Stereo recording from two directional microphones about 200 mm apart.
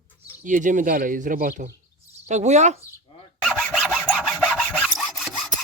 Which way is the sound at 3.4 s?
Centre (ahead or behind).